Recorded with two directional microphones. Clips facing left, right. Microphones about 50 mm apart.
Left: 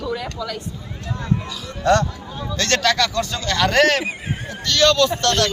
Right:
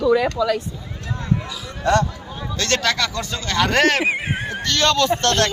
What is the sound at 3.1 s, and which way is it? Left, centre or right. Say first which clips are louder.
Speech: left 2 dB; right.